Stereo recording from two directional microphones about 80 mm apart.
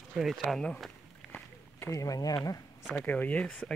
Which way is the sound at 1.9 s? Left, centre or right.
Left.